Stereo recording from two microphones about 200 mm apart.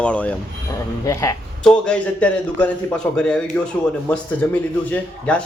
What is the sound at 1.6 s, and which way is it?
A man's voice, 5° left (ahead or behind).